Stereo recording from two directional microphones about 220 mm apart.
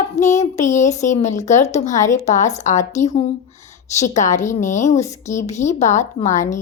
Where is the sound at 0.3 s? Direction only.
30° left (ahead or behind).